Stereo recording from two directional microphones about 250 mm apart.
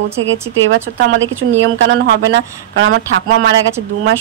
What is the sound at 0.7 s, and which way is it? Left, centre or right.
Speech, right.